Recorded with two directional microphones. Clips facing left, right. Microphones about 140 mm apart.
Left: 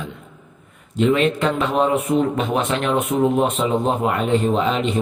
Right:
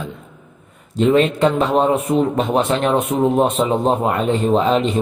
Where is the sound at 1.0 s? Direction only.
35° right (ahead or behind).